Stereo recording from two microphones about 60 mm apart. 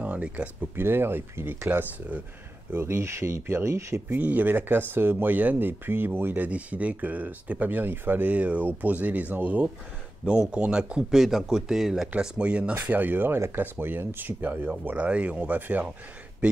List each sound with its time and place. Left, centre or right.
0.0 s a sound: right
0.7 s speech: right
2.7 s speech: right
4.1 s speech: right
6.4 s speech: right
10.2 s speech: centre
12.2 s speech: centre
12.8 s speech: right